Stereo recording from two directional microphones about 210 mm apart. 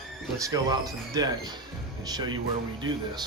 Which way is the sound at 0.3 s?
15° right (ahead or behind).